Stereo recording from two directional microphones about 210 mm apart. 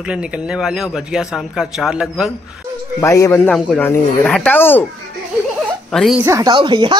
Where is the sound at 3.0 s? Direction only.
10° left (ahead or behind).